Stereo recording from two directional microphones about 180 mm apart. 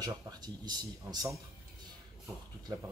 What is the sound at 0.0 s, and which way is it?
Speech, 20° right (ahead or behind).